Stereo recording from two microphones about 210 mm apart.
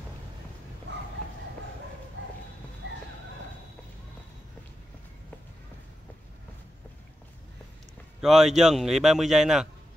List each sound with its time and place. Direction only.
2.2 s bow-wow: 60° right (ahead or behind)
2.8 s horse: 60° right (ahead or behind)
8.2 s a man's voice: centre (ahead or behind)